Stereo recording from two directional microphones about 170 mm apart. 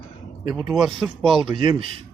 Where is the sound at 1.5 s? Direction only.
30° right (ahead or behind).